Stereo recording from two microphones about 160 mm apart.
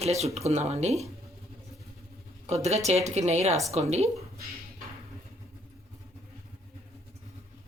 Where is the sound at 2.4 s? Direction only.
45° right (ahead or behind).